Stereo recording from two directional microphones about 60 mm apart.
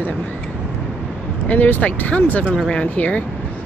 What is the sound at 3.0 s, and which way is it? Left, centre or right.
Speech, left.